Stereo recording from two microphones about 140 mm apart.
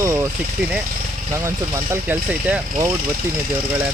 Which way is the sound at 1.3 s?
20° right (ahead or behind).